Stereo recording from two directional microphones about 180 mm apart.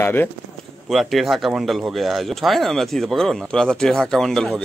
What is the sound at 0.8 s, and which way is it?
Speech, centre (ahead or behind).